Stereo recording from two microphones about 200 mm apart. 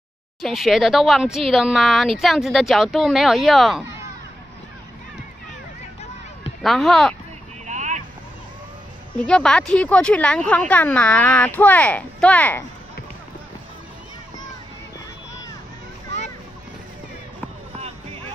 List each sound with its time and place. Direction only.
0.4 s speech: centre (ahead or behind)
6.6 s speech: centre (ahead or behind)
7.6 s vehicle: 35° right (ahead or behind)
9.2 s speech: 5° left (ahead or behind)
17.7 s a sound: 30° right (ahead or behind)